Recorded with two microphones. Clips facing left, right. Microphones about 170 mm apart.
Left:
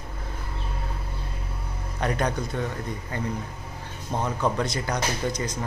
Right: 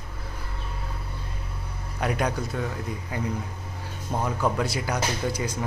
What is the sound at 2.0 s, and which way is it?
Speech, 10° right (ahead or behind).